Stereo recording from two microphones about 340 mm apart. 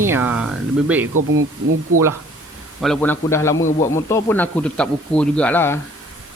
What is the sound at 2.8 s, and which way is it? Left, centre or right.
A man's voice, centre.